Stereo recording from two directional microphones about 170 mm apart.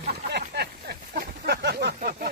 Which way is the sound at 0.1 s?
70° right (ahead or behind).